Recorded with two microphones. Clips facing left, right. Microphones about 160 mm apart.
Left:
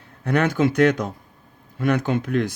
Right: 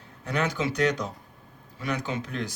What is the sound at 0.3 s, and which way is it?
Speech, 55° left (ahead or behind).